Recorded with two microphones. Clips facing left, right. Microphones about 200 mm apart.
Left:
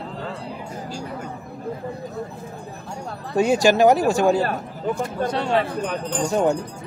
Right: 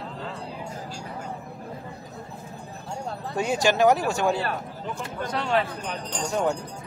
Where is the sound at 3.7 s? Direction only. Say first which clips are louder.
Left 3 dB; 35° left (ahead or behind).